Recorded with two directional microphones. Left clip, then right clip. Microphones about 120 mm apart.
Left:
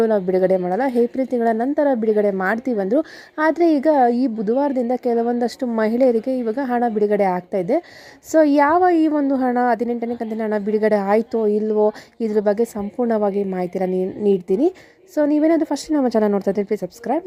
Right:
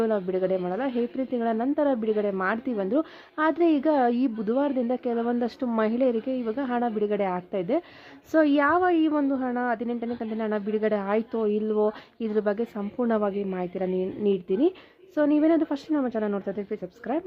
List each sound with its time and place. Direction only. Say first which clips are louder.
0.0 s a woman's voice: left 8 dB; 50° left (ahead or behind); by 5.6 s 35° left (ahead or behind)
5.7 s a woman's voice: left 7 dB; 45° left (ahead or behind)
9.3 s a woman's voice: left 9 dB; 65° left (ahead or behind); by 13.6 s 35° left (ahead or behind)
13.6 s a woman's voice: left 7 dB; 45° left (ahead or behind)
16.0 s speech: left 10 dB; 75° left (ahead or behind)
16.5 s speech: left 11 dB; 60° left (ahead or behind)
17.1 s a woman's voice: left 7 dB; 40° left (ahead or behind)